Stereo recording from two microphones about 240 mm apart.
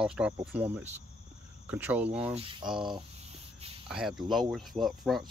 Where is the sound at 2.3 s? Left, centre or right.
Right.